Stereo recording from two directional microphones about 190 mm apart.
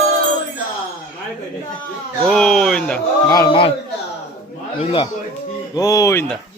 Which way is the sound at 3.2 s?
20° left (ahead or behind).